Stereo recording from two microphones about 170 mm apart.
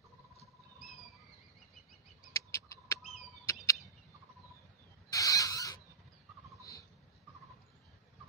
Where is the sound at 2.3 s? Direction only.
20° left (ahead or behind).